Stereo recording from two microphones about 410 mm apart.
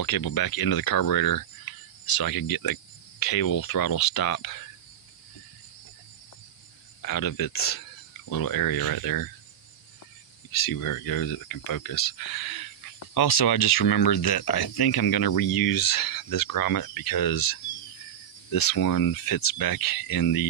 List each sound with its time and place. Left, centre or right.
0.0 s speech: left
7.0 s speech: left
10.6 s speech: left